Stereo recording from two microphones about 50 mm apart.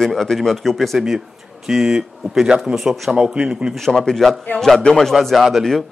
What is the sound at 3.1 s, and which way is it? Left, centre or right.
Speech, centre.